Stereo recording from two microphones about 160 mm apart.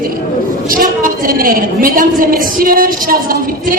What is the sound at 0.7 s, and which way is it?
A woman's voice, 60° right (ahead or behind).